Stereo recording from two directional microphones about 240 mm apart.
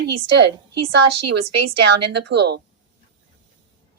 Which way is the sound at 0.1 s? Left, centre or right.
Right.